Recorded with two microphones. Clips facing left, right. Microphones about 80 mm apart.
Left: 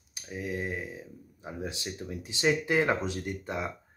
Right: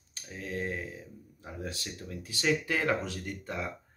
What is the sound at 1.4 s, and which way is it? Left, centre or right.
Speech, centre.